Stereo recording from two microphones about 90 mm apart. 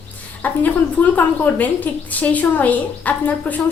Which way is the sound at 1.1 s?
20° left (ahead or behind).